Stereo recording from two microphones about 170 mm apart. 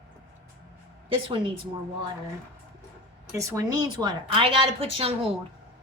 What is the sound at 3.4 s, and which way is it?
A woman's voice, 20° right (ahead or behind).